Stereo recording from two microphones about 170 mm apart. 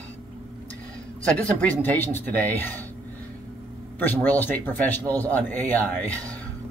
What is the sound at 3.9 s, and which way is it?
Speech, 10° left (ahead or behind).